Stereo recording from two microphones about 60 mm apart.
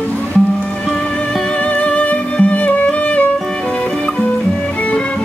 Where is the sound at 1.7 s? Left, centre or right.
Left.